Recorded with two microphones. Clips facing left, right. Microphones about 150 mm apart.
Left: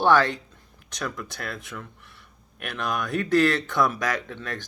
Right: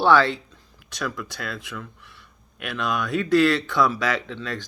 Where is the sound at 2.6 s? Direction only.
50° left (ahead or behind).